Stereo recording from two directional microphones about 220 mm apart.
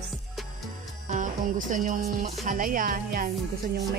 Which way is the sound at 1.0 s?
35° right (ahead or behind).